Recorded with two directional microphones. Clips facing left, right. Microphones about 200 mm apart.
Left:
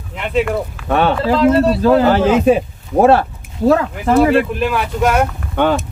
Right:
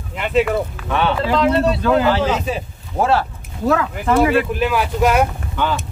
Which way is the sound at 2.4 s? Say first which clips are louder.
Left 12 dB; 55° left (ahead or behind).